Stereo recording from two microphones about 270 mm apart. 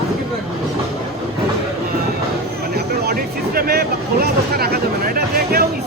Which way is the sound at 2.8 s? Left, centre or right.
Right.